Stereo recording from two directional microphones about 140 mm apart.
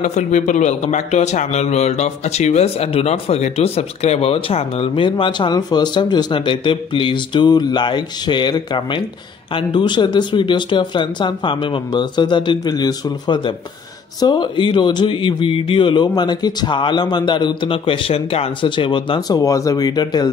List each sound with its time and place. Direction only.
0.0 s a man's voice: 60° left (ahead or behind); by 20.2 s 30° left (ahead or behind)